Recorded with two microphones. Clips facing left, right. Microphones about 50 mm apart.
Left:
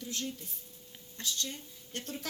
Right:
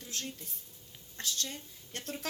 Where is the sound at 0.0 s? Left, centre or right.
Right.